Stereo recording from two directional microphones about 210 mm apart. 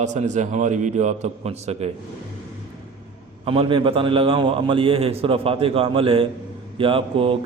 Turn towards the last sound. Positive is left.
turn(degrees=-25)  # may be behind; listen again after turning